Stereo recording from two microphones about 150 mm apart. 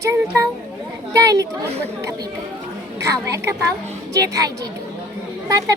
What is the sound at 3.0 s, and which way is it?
A child's voice, 20° right (ahead or behind).